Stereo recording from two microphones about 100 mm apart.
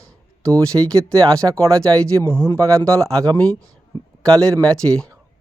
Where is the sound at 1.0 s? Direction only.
10° left (ahead or behind).